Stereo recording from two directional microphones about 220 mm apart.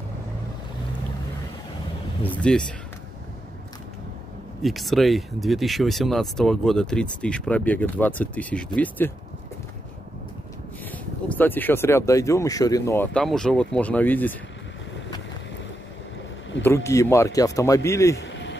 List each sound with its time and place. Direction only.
2.2 s speech: 5° left (ahead or behind)
4.6 s speech: centre (ahead or behind)
10.9 s speech: 10° left (ahead or behind)
16.6 s speech: 10° left (ahead or behind)
18.1 s a sound: 55° left (ahead or behind)